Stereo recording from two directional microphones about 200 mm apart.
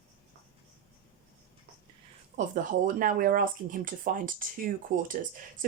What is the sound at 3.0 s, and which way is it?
Speech, 45° right (ahead or behind).